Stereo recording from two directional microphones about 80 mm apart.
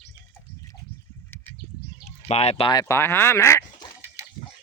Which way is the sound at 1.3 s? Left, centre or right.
Left.